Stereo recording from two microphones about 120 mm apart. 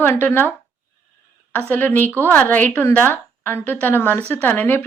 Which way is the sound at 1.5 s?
15° left (ahead or behind).